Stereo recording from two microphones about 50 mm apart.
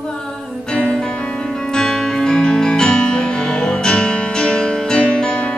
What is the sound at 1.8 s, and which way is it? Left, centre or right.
Music, centre.